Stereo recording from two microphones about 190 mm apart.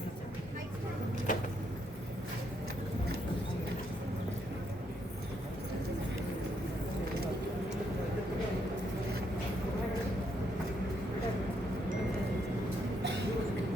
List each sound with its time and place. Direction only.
1.3 s vehicle: 45° left (ahead or behind)